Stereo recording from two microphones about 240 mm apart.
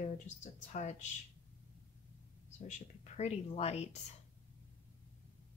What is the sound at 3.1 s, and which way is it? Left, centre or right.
Speech, left.